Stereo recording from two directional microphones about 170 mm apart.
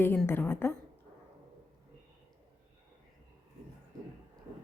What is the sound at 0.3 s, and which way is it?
Speech, 10° left (ahead or behind).